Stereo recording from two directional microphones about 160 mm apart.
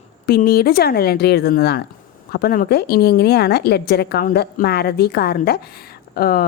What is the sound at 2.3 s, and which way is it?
A woman's voice, 75° left (ahead or behind).